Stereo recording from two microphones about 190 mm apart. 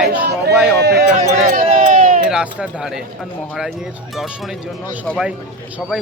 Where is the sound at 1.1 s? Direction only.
45° right (ahead or behind).